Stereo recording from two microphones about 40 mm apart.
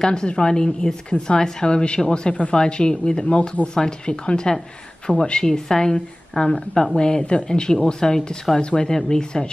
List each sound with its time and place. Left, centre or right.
0.0 s speech: centre
3.3 s speech: left
3.6 s a woman's voice: left